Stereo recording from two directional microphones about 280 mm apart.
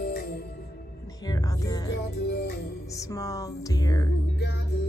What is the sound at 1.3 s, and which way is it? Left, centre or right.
Music, centre.